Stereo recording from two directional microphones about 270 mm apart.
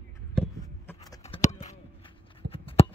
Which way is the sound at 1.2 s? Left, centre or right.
Left.